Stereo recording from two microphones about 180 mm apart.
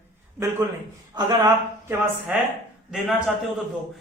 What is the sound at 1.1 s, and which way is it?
Speech, 20° right (ahead or behind).